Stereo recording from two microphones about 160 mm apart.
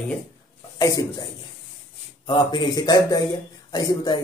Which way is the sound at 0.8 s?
20° left (ahead or behind).